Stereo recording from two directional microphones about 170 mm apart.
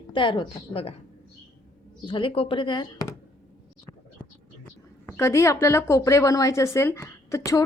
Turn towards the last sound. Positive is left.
turn(degrees=20)  # may be behind; listen again after turning